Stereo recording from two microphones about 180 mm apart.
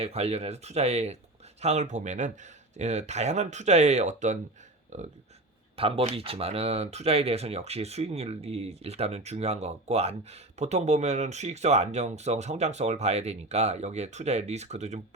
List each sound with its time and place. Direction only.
0.0 s speech: 35° right (ahead or behind)
5.7 s speech: 30° right (ahead or behind)